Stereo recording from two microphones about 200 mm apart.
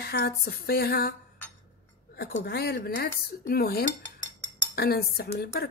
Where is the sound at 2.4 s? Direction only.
50° left (ahead or behind).